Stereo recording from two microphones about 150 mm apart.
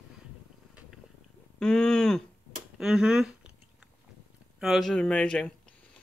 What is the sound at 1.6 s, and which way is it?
Speech, 5° left (ahead or behind).